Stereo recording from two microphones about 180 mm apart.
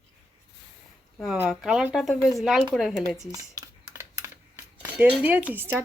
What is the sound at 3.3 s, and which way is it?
Computer keyboard, 20° right (ahead or behind).